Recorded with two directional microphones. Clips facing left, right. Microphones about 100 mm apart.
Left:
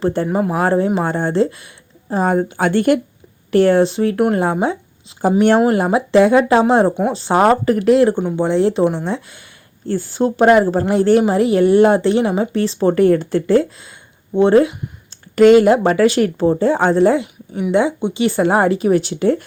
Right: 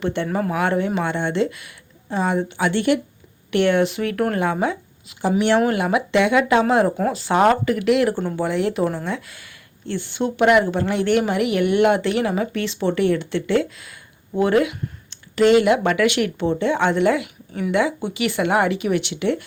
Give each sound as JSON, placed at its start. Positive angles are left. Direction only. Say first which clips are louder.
{"t": 0.0, "sound": "a woman's voice", "louder": "left 5 dB", "side_deg": 35}
{"t": 0.3, "sound": "speech", "louder": "left 5 dB", "side_deg": 20}
{"t": 0.5, "sound": "a woman's voice", "louder": "left 5 dB", "side_deg": 35}
{"t": 4.6, "sound": "a sound", "louder": "left 3 dB", "side_deg": 30}
{"t": 5.5, "sound": "a woman's voice", "louder": "left 4 dB", "side_deg": 30}
{"t": 8.1, "sound": "speech", "louder": "left 5 dB", "side_deg": 10}
{"t": 8.4, "sound": "speech", "louder": "left 7 dB", "side_deg": 30}
{"t": 9.8, "sound": "a woman's voice", "louder": "left 6 dB", "side_deg": 40}
{"t": 15.4, "sound": "a woman's voice", "louder": "left 6 dB", "side_deg": 45}